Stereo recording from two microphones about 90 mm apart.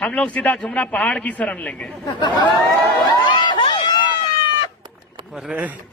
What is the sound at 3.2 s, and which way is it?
Run, 60° left (ahead or behind).